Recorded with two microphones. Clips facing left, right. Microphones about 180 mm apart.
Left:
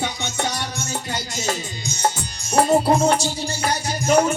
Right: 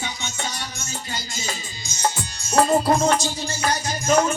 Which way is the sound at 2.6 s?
30° left (ahead or behind).